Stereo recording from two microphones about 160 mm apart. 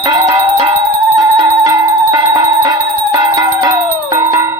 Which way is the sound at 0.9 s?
15° right (ahead or behind).